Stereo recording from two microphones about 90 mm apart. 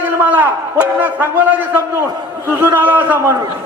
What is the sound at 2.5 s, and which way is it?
Speech, 20° right (ahead or behind).